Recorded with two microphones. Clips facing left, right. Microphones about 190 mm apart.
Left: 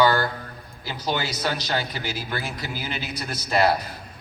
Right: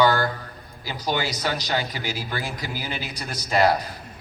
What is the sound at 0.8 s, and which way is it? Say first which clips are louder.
A man's voice: right 1 dB; 15° right (ahead or behind).